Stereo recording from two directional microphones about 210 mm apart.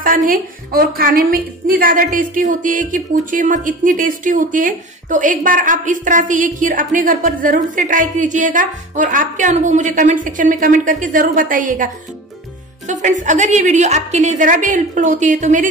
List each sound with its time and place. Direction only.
0.3 s a woman's voice: 45° right (ahead or behind)